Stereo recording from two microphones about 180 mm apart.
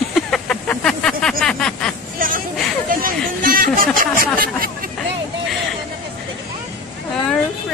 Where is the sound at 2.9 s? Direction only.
50° right (ahead or behind).